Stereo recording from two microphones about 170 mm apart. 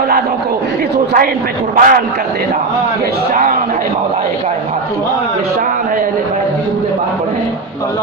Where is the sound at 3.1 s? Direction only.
55° right (ahead or behind).